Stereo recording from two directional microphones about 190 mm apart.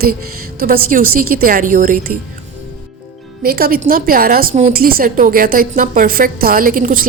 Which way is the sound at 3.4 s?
50° right (ahead or behind).